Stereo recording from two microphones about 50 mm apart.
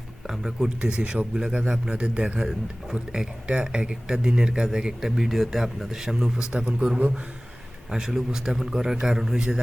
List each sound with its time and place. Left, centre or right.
0.3 s speech: centre
0.8 s speech: centre